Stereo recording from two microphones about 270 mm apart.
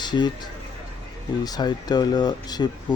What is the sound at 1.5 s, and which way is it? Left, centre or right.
Speech, centre.